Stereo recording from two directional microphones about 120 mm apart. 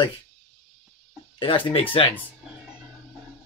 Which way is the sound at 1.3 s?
45° left (ahead or behind).